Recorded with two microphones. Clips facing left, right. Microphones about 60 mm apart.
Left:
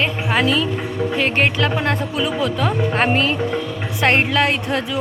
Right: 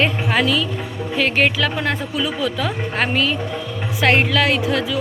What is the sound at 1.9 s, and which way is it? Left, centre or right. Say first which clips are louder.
Speech: left 2 dB; centre.